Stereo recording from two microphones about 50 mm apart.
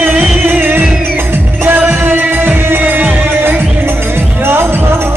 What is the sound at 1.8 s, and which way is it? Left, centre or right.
Music, right.